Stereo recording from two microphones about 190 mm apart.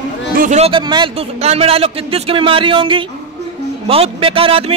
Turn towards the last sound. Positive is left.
turn(degrees=-30)  # may be behind; listen again after turning